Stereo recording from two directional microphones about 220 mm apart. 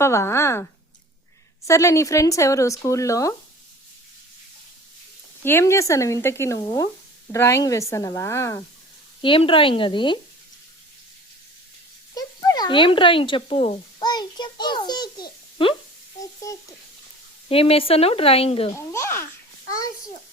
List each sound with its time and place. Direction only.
0.0 s speech: 10° left (ahead or behind)
5.4 s speech: 10° left (ahead or behind)
9.2 s speech: 25° left (ahead or behind)
12.1 s a sound: 15° left (ahead or behind)
16.2 s frying: 15° left (ahead or behind)
17.5 s speech: 25° left (ahead or behind)
18.8 s a sound: 15° left (ahead or behind)